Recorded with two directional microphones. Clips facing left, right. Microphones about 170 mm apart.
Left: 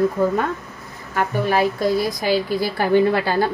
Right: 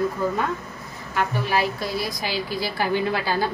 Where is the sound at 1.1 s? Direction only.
50° left (ahead or behind).